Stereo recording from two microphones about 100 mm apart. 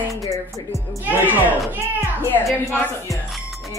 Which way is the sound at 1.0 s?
20° right (ahead or behind).